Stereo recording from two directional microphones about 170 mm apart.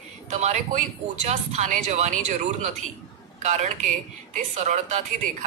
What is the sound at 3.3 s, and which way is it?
A man's voice, 45° right (ahead or behind).